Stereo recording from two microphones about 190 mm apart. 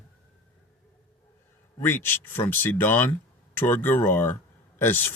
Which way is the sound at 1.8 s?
10° left (ahead or behind).